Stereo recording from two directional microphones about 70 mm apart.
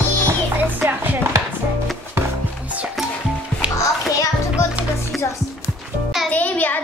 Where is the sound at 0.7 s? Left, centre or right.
Right.